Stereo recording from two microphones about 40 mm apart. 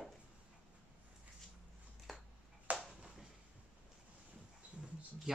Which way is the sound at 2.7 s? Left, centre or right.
Right.